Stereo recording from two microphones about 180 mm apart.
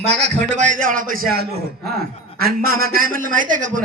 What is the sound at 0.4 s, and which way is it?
A man's voice, 40° right (ahead or behind).